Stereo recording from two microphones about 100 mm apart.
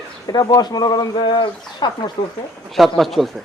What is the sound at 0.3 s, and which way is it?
Speech, 40° left (ahead or behind).